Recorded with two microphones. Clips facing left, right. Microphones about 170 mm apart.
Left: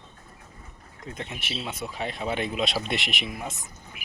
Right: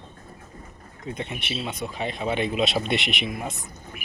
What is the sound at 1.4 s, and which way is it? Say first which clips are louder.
Speech: right 3 dB; centre (ahead or behind).